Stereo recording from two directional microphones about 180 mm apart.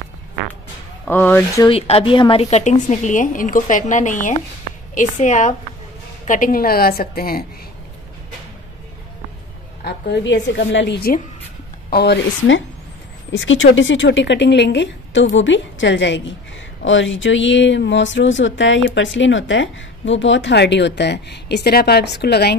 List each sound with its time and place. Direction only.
1.0 s speech: 10° left (ahead or behind)
1.7 s a woman's voice: 30° left (ahead or behind); by 7.4 s 55° left (ahead or behind)
9.8 s a woman's voice: 70° left (ahead or behind)
13.3 s a woman's voice: 90° left; by 22.6 s 65° left (ahead or behind)